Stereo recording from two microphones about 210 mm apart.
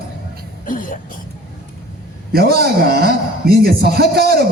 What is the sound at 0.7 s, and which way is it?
Throat clearing, 40° left (ahead or behind).